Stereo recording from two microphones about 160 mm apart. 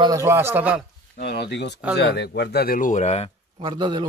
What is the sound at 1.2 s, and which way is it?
Speech, 90° left.